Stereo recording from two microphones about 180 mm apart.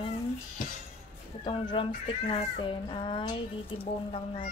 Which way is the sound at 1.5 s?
30° left (ahead or behind).